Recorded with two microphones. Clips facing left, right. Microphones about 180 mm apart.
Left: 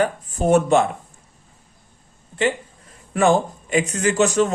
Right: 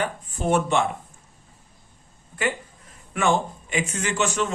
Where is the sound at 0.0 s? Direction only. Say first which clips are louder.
Left 6 dB; 40° left (ahead or behind).